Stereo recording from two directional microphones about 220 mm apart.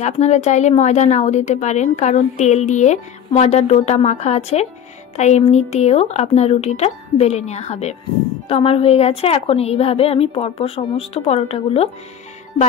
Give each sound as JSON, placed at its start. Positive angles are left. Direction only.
{"t": 0.0, "sound": "a woman's voice", "side_deg": 30}